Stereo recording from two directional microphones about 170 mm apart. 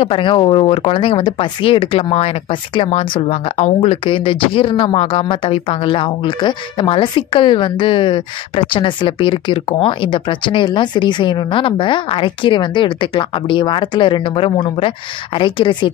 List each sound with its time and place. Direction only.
0.0 s speech: 30° left (ahead or behind)